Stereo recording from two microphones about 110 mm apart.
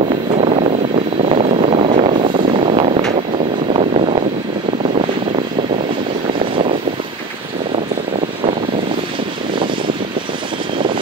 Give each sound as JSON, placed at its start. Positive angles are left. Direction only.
{"t": 0.4, "sound": "vehicle", "side_deg": -90}
{"t": 1.3, "sound": "vehicle", "side_deg": -65}